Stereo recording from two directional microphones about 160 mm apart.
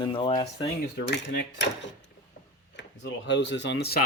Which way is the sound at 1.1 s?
90° left.